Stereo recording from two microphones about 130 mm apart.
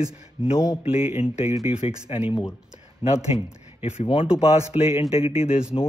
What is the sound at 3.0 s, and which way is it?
Speech, 45° left (ahead or behind).